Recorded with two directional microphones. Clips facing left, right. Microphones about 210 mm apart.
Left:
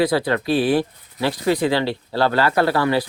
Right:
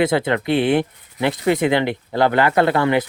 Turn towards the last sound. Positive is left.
turn(degrees=-20)  # may be behind; listen again after turning